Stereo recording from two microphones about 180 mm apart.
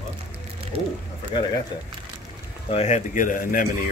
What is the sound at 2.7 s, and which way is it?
Speech, 40° left (ahead or behind).